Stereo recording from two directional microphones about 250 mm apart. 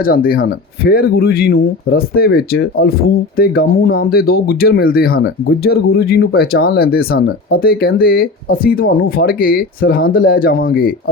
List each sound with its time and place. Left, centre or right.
0.0 s speech: left